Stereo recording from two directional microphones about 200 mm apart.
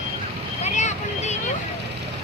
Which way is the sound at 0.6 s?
35° left (ahead or behind).